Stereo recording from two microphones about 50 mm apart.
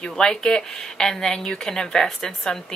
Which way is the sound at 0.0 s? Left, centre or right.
Centre.